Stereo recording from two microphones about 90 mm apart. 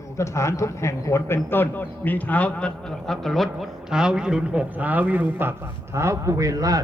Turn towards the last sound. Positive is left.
turn(degrees=-40)  # may be behind; listen again after turning